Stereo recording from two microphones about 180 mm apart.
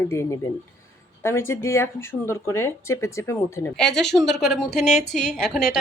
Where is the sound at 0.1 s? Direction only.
15° left (ahead or behind).